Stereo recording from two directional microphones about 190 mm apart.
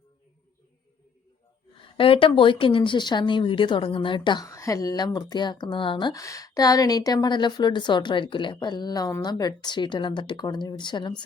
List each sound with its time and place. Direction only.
2.0 s speech: 30° left (ahead or behind)